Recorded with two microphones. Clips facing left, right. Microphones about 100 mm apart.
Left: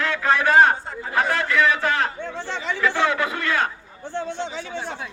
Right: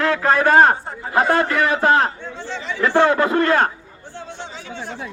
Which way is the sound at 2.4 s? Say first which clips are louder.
Right 1 dB; 55° left (ahead or behind).